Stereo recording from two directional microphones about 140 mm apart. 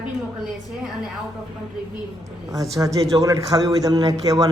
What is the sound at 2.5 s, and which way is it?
A man's voice, 25° right (ahead or behind).